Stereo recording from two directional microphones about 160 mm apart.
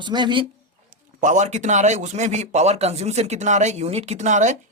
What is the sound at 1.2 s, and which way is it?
Speech, 50° right (ahead or behind).